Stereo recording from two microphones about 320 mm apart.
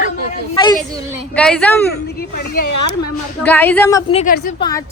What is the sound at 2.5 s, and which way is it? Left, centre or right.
Speech, left.